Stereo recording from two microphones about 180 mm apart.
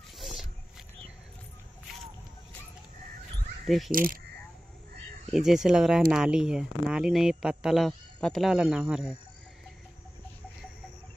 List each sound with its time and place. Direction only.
0.2 s roaring cats: centre (ahead or behind)
3.6 s speech: centre (ahead or behind)
3.9 s speech: 50° right (ahead or behind)
5.3 s speech: centre (ahead or behind)